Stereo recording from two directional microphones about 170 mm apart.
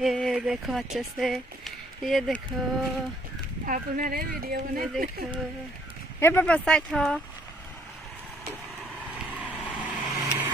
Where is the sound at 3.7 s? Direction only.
55° right (ahead or behind).